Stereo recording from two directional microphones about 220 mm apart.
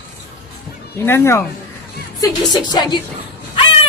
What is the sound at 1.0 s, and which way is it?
A woman's voice, 10° left (ahead or behind).